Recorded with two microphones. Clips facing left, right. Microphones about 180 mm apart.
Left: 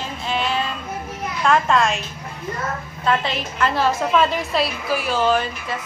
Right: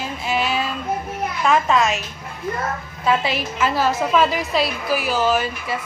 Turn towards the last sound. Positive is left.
turn(degrees=-5)  # may be behind; listen again after turning